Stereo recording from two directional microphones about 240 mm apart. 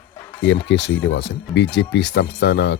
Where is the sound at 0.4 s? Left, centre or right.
Left.